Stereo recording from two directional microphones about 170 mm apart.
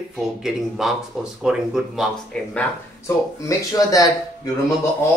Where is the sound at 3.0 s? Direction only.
20° left (ahead or behind).